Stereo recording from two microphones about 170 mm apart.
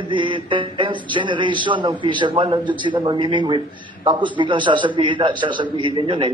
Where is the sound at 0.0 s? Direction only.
30° right (ahead or behind).